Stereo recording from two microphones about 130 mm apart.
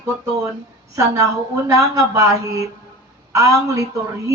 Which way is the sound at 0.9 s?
25° right (ahead or behind).